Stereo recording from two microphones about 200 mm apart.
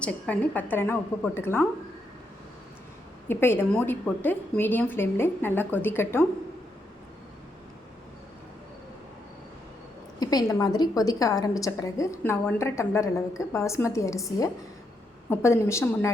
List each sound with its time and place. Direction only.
0.0 s a woman's voice: 10° left (ahead or behind)
3.2 s a woman's voice: 10° left (ahead or behind)
10.2 s a woman's voice: 20° left (ahead or behind)